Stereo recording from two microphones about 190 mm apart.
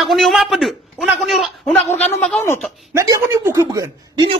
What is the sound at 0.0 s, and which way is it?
A man's voice, centre (ahead or behind).